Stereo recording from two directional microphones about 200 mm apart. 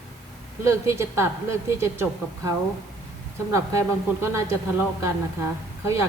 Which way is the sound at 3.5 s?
15° right (ahead or behind).